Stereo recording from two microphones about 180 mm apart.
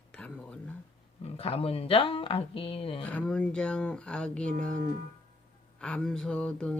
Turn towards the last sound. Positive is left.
turn(degrees=5)  # may be behind; listen again after turning